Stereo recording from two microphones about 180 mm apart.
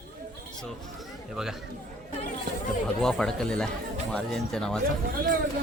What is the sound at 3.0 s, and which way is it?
Speech, centre (ahead or behind).